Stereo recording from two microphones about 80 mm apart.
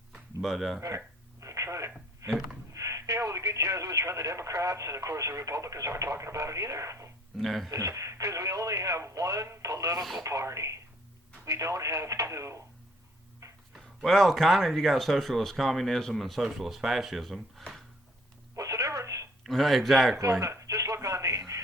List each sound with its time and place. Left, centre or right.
0.4 s speech: centre
0.8 s telephone: right
2.2 s speech: right
7.3 s speech: centre
7.7 s speech: right
10.0 s speech: centre
10.2 s speech: right
13.4 s a sound: right
13.7 s speech: centre
18.5 s telephone: right
19.5 s speech: centre
20.4 s telephone: right